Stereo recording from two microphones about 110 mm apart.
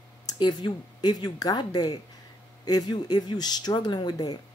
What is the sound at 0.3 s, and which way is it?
Speech, 40° left (ahead or behind).